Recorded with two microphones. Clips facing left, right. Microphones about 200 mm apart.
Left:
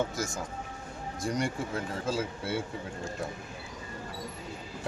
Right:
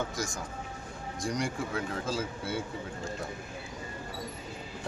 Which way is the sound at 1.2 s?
5° left (ahead or behind).